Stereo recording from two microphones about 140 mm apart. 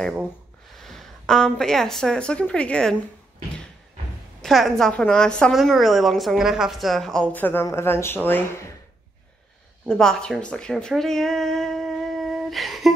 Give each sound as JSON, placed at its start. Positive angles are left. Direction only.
{"t": 0.7, "sound": "speech", "side_deg": 0}
{"t": 4.4, "sound": "a woman's voice", "side_deg": 0}
{"t": 9.8, "sound": "a woman's voice", "side_deg": 5}